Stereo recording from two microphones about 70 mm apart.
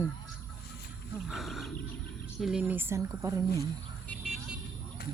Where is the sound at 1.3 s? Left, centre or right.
Centre.